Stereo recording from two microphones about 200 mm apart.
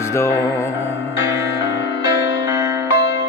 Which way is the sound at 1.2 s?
60° left (ahead or behind).